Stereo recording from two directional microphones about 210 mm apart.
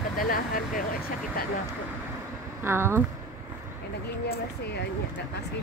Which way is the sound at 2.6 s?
10° right (ahead or behind).